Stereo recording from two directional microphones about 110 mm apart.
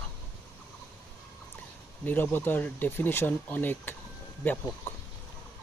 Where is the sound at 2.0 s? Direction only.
15° left (ahead or behind).